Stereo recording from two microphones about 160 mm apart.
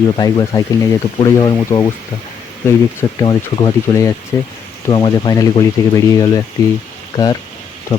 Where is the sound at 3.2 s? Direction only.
25° left (ahead or behind).